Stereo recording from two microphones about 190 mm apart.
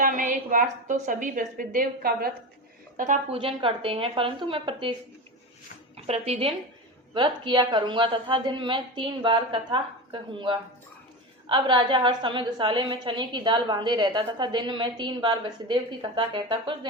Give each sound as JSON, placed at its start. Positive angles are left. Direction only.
{"t": 0.0, "sound": "a woman's voice", "side_deg": -45}
{"t": 3.3, "sound": "a woman's voice", "side_deg": -25}
{"t": 6.0, "sound": "a woman's voice", "side_deg": -35}